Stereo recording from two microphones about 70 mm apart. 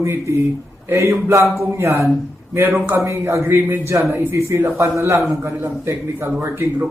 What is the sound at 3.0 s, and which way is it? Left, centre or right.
Speech, right.